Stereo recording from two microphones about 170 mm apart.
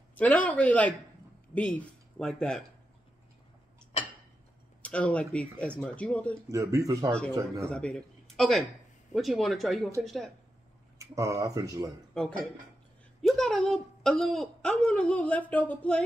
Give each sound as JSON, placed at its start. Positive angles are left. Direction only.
{"t": 0.1, "sound": "speech", "side_deg": 10}
{"t": 4.8, "sound": "speech", "side_deg": 5}
{"t": 6.5, "sound": "speech", "side_deg": -20}
{"t": 7.1, "sound": "speech", "side_deg": 5}
{"t": 7.3, "sound": "speech", "side_deg": -20}
{"t": 7.7, "sound": "a woman's voice", "side_deg": 5}
{"t": 11.0, "sound": "speech", "side_deg": -20}
{"t": 12.1, "sound": "a woman's voice", "side_deg": 5}